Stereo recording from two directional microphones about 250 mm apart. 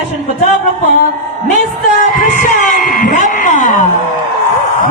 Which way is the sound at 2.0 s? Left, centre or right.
Left.